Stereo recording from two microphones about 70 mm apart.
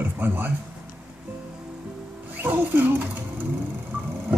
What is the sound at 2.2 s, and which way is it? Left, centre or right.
Speech, right.